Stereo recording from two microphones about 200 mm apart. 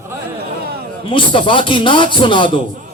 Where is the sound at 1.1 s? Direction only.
25° left (ahead or behind).